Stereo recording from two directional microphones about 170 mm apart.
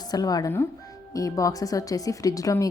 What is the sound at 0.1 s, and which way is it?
Speech, 20° left (ahead or behind).